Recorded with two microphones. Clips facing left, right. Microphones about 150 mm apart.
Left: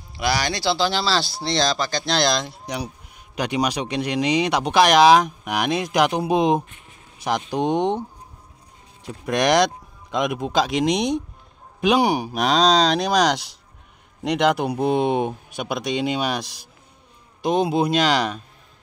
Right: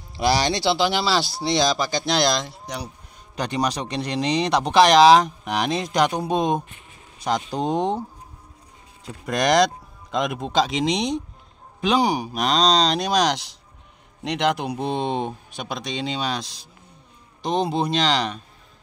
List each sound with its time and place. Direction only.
0.1 s speech: 35° right (ahead or behind); by 2.2 s 15° right (ahead or behind)
2.4 s speech: 5° left (ahead or behind)
9.0 s speech: 5° left (ahead or behind)
12.2 s speech: 5° left (ahead or behind)